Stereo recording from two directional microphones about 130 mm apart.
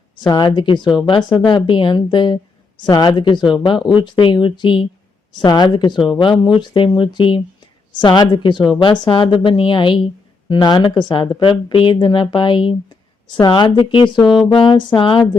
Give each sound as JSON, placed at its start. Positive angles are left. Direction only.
{"t": 0.2, "sound": "speech", "side_deg": 35}